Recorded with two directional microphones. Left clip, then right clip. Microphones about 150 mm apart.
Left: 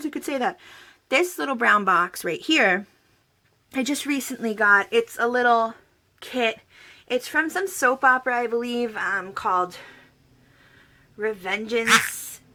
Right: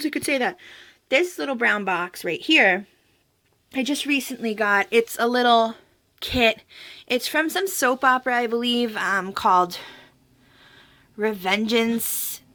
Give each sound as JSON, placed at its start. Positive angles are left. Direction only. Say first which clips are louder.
{"t": 0.0, "sound": "speech", "louder": "right 3 dB", "side_deg": 0}
{"t": 4.9, "sound": "a woman's voice", "louder": "right 2 dB", "side_deg": -35}
{"t": 7.2, "sound": "speech", "louder": "even", "side_deg": -30}
{"t": 9.1, "sound": "a woman's voice", "louder": "right 6 dB", "side_deg": -65}
{"t": 12.1, "sound": "a sound", "louder": "right 5 dB", "side_deg": -60}